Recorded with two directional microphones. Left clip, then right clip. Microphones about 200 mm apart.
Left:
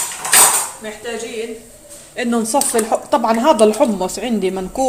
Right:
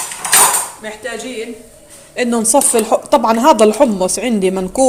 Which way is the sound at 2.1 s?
20° right (ahead or behind).